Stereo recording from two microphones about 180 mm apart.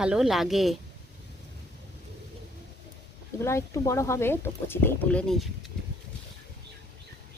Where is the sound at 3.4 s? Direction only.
15° left (ahead or behind).